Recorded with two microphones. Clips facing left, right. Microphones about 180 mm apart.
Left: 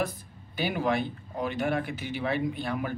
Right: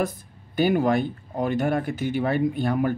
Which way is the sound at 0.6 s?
45° right (ahead or behind).